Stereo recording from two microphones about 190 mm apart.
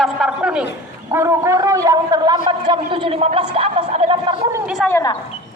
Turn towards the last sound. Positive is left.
turn(degrees=15)  # may be behind; listen again after turning